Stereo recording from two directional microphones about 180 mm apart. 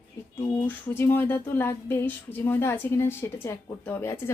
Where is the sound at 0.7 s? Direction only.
10° left (ahead or behind).